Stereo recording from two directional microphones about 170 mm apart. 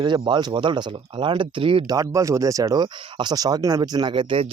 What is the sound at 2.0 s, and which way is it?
Speech, 20° right (ahead or behind).